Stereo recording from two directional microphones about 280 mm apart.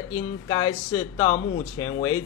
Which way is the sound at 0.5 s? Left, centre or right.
Centre.